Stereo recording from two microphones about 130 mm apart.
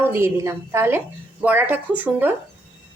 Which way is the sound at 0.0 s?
15° right (ahead or behind).